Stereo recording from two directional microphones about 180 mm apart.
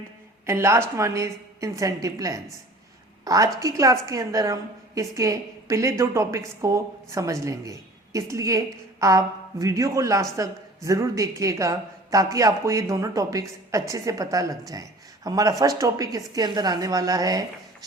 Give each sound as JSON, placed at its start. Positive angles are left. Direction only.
{"t": 0.4, "sound": "a woman's voice", "side_deg": -15}